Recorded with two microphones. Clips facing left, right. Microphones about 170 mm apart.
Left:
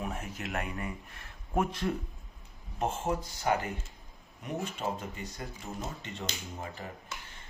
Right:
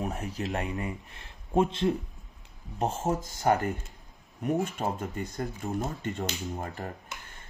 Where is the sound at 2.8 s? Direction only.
40° right (ahead or behind).